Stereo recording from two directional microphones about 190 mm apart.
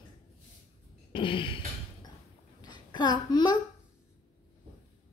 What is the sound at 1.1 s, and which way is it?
Throat clearing, 25° left (ahead or behind).